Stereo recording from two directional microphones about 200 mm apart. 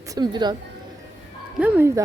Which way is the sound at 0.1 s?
20° right (ahead or behind).